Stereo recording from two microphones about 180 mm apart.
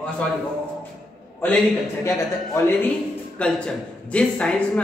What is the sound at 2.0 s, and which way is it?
Speech, 15° left (ahead or behind).